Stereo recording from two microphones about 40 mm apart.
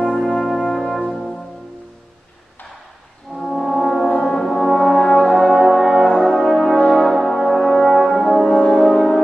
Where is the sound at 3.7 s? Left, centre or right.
Centre.